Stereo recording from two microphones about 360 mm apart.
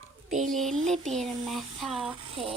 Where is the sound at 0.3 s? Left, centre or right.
Centre.